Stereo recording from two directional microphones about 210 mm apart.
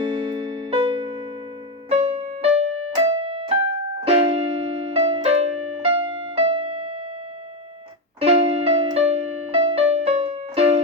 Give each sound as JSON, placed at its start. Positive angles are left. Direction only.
{"t": 0.0, "sound": "music", "side_deg": -20}
{"t": 4.0, "sound": "keyboard", "side_deg": -30}
{"t": 8.2, "sound": "music", "side_deg": -30}